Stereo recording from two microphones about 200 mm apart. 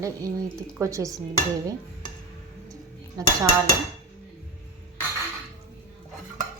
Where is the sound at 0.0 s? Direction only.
15° right (ahead or behind).